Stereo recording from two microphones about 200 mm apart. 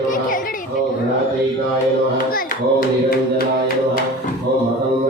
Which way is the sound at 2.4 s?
45° left (ahead or behind).